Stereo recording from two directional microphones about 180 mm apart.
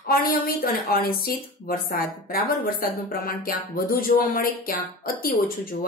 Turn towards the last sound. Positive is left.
turn(degrees=55)  # may be behind; listen again after turning